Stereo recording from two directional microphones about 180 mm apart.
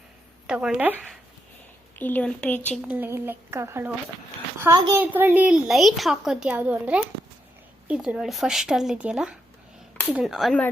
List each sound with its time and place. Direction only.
0.4 s speech: 5° right (ahead or behind)
2.0 s speech: 10° left (ahead or behind)
2.8 s a child's voice: 10° right (ahead or behind)